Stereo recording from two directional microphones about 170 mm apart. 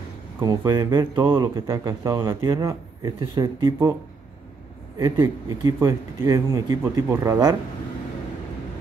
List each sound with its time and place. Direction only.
0.4 s speech: 25° right (ahead or behind)
4.9 s speech: 20° right (ahead or behind)